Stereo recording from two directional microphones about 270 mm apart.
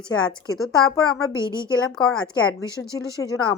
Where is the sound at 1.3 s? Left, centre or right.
Centre.